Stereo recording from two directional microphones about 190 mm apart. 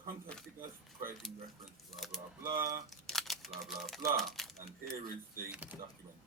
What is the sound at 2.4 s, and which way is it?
Speech, 15° right (ahead or behind).